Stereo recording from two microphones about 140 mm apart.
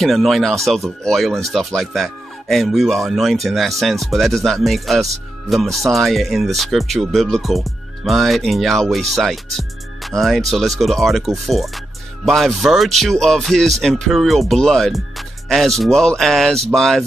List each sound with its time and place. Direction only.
0.0 s speech: centre (ahead or behind)